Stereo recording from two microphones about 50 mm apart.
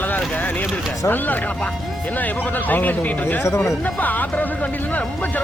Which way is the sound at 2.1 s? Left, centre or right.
Left.